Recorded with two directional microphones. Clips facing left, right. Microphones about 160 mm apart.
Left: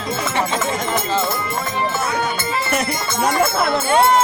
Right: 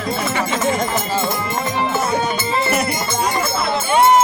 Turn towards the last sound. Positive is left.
turn(degrees=-20)  # may be behind; listen again after turning